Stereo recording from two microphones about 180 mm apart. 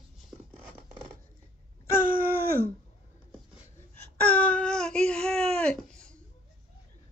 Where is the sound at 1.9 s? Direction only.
50° right (ahead or behind).